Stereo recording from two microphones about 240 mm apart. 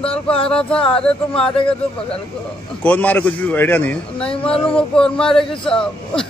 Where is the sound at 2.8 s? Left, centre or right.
Centre.